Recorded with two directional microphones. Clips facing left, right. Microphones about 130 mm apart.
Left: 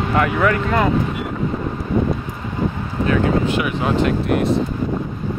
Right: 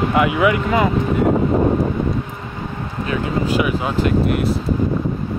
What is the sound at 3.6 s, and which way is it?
Speech, centre (ahead or behind).